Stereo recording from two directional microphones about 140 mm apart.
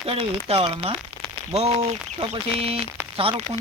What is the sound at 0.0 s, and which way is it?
Speech, 45° right (ahead or behind).